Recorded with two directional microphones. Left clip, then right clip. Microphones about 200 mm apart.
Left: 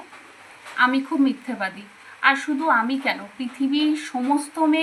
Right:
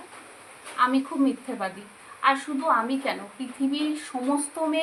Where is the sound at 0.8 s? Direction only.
20° right (ahead or behind).